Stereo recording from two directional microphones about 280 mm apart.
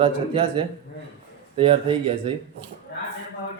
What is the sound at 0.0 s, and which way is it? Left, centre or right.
Speech, centre.